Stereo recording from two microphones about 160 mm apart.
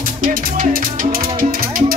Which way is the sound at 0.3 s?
65° right (ahead or behind).